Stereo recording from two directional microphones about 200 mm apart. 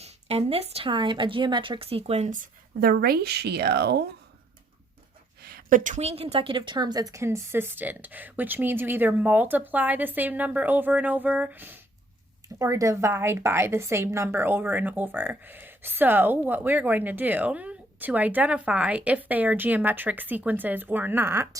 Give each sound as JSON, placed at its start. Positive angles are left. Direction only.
{"t": 0.0, "sound": "speech", "side_deg": -30}
{"t": 5.4, "sound": "a woman's voice", "side_deg": -50}